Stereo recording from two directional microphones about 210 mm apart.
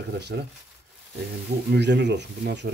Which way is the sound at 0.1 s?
50° right (ahead or behind).